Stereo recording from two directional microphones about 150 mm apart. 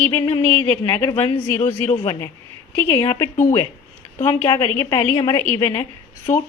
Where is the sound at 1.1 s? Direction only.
40° left (ahead or behind).